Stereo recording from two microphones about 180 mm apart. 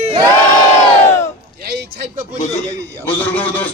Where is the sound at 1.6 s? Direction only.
65° right (ahead or behind).